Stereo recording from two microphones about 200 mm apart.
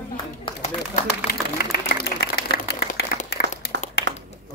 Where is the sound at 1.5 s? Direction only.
50° left (ahead or behind).